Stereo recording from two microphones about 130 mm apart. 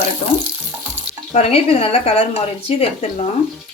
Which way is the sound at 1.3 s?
50° left (ahead or behind).